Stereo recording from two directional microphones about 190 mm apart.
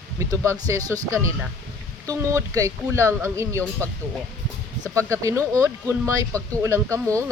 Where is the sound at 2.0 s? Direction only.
15° right (ahead or behind).